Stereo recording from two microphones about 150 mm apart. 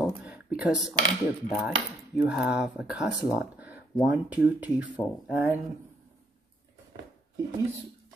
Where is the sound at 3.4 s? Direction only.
10° right (ahead or behind).